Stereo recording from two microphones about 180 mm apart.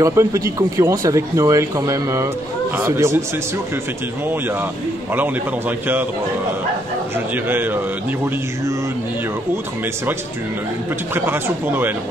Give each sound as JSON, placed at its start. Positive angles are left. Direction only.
{"t": 0.0, "sound": "speech", "side_deg": -15}
{"t": 4.3, "sound": "speech", "side_deg": -10}
{"t": 7.2, "sound": "speech", "side_deg": -10}
{"t": 11.1, "sound": "speech", "side_deg": -15}